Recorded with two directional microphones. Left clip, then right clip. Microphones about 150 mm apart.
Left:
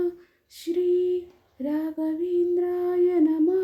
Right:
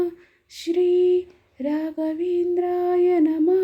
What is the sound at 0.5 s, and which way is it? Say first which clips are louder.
Lullaby: right 4 dB; 10° right (ahead or behind).